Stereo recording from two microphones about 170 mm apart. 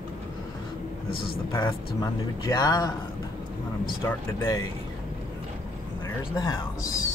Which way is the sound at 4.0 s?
15° left (ahead or behind).